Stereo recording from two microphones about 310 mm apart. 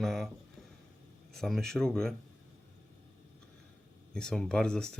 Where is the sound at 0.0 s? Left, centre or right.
Centre.